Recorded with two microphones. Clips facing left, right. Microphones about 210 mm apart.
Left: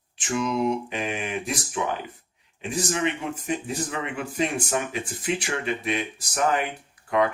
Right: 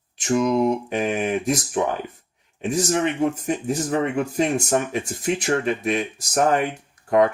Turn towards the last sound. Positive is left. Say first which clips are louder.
# right 5 dB
turn(degrees=-45)  # may be behind; listen again after turning